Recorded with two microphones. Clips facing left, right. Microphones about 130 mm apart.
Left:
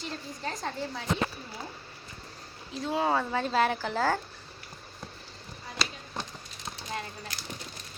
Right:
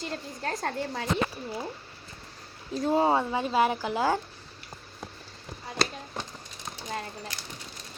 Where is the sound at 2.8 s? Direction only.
40° right (ahead or behind).